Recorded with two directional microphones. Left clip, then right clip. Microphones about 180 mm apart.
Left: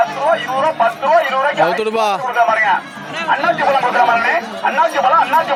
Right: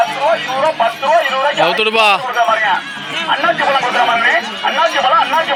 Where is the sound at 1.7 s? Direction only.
10° left (ahead or behind).